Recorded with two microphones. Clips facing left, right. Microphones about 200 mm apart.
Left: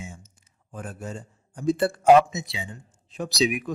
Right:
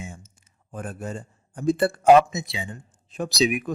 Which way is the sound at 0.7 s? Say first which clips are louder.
Right 3 dB; 55° right (ahead or behind).